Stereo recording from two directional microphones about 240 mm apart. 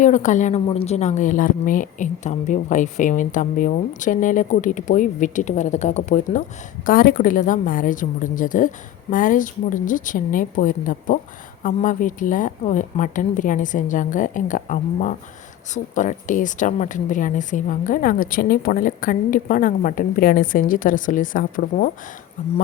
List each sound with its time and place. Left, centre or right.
0.0 s a woman's voice: left